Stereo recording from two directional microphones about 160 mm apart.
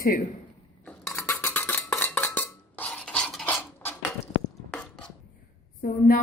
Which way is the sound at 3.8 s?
15° left (ahead or behind).